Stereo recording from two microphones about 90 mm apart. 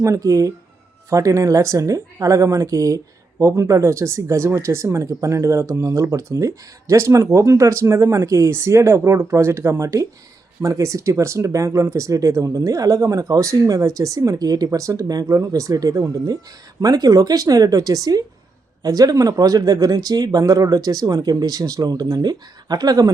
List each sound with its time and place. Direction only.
0.0 s speech: 35° right (ahead or behind)